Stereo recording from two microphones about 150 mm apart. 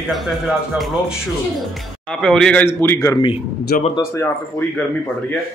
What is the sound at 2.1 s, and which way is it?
A woman's voice, 5° left (ahead or behind).